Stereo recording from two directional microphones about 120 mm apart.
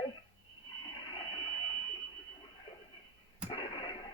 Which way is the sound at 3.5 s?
45° left (ahead or behind).